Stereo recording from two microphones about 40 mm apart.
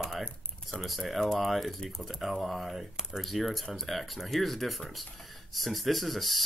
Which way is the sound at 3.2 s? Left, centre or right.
Centre.